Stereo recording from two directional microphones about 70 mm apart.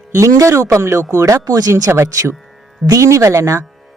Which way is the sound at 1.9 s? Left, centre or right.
Right.